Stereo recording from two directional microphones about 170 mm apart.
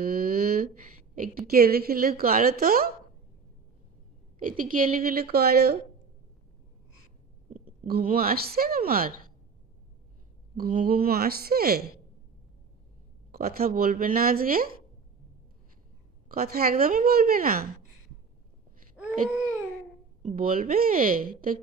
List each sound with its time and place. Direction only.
0.0 s a sound: 60° right (ahead or behind)
1.1 s a woman's voice: 55° right (ahead or behind)
4.4 s a woman's voice: 55° right (ahead or behind)
7.8 s a woman's voice: 60° right (ahead or behind)
10.6 s a woman's voice: 55° right (ahead or behind)
13.3 s a woman's voice: 60° right (ahead or behind)
16.3 s a woman's voice: 60° right (ahead or behind)
19.0 s baby cry: 5° right (ahead or behind)
20.2 s a woman's voice: 50° right (ahead or behind)